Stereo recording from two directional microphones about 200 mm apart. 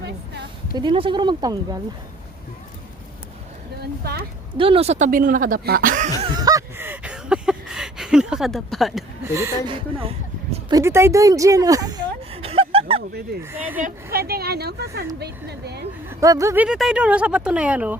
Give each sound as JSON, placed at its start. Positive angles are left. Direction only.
{"t": 0.8, "sound": "speech", "side_deg": -25}
{"t": 3.8, "sound": "speech", "side_deg": -50}
{"t": 4.5, "sound": "speech", "side_deg": -25}
{"t": 6.4, "sound": "honk", "side_deg": -15}
{"t": 9.2, "sound": "speech", "side_deg": -15}
{"t": 9.7, "sound": "a sound", "side_deg": -30}
{"t": 10.8, "sound": "a woman's voice", "side_deg": -15}
{"t": 13.5, "sound": "speech", "side_deg": -10}
{"t": 13.8, "sound": "speech", "side_deg": -50}
{"t": 16.0, "sound": "speech", "side_deg": -15}
{"t": 16.6, "sound": "speech", "side_deg": -5}